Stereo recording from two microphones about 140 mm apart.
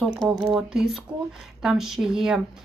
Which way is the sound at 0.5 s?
5° right (ahead or behind).